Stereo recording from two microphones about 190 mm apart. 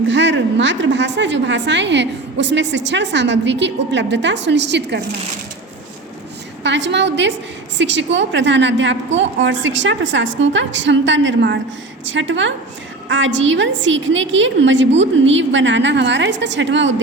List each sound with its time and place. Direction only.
0.1 s a woman's voice: 70° right (ahead or behind)
6.6 s a woman's voice: 65° right (ahead or behind)
12.0 s a woman's voice: 80° right